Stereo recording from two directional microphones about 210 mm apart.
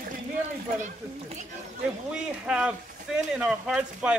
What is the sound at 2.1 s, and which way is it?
Speech, 5° right (ahead or behind).